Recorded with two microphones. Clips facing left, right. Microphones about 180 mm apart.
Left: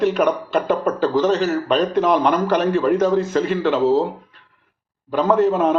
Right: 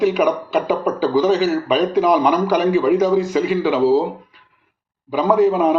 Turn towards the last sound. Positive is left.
turn(degrees=0)  # may be behind; listen again after turning